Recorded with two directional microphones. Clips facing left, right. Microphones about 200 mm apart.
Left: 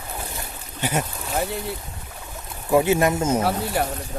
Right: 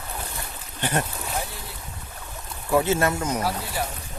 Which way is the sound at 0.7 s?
10° left (ahead or behind).